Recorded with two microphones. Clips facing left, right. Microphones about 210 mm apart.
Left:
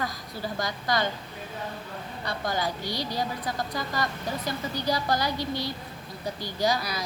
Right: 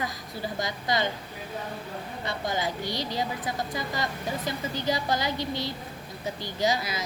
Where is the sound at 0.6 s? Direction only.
20° right (ahead or behind).